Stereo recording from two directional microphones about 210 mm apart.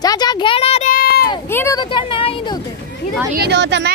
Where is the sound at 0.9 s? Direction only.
45° left (ahead or behind).